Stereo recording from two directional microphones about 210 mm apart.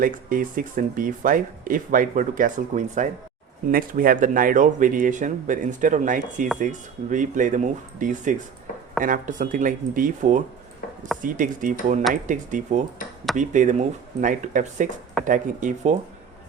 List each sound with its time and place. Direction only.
0.0 s speech: 40° right (ahead or behind)